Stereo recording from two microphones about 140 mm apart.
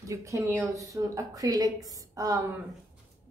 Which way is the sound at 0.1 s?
20° right (ahead or behind).